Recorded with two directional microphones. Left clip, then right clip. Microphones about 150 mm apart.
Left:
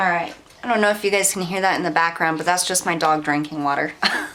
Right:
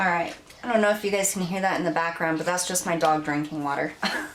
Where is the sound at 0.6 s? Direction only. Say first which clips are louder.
Left 4 dB; 30° left (ahead or behind).